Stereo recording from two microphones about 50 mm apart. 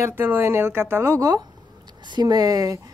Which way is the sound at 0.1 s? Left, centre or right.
Right.